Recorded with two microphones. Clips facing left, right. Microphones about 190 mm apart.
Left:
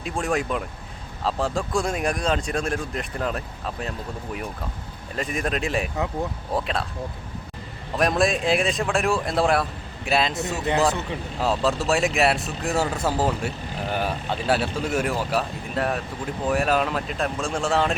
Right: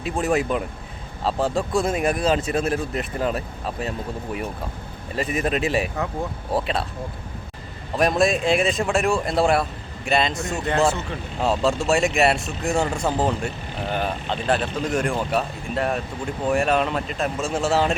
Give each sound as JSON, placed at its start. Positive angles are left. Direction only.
{"t": 0.0, "sound": "speech", "side_deg": -5}
{"t": 5.1, "sound": "speech", "side_deg": -5}
{"t": 7.9, "sound": "speech", "side_deg": 0}
{"t": 11.3, "sound": "speech", "side_deg": 0}